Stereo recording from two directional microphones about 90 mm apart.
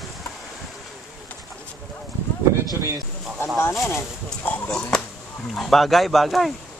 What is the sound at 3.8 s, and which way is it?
Speech, 25° left (ahead or behind).